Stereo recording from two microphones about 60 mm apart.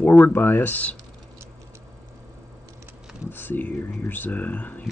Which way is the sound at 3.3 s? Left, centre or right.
Left.